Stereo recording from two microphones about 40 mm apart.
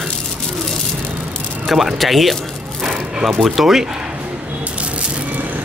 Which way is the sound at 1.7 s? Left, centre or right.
Centre.